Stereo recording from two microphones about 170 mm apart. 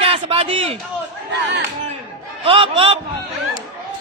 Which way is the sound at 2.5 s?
35° right (ahead or behind).